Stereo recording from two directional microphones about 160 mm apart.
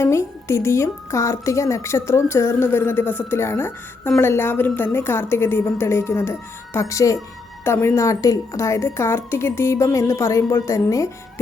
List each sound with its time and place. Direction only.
0.0 s a woman's voice: 15° left (ahead or behind)